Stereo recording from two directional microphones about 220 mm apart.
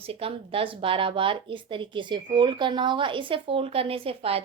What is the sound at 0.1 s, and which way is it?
Speech, 25° right (ahead or behind).